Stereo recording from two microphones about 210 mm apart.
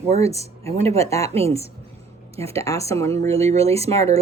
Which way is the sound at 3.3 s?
30° right (ahead or behind).